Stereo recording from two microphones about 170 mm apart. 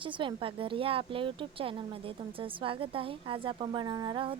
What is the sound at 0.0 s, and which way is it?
Speech, 30° right (ahead or behind).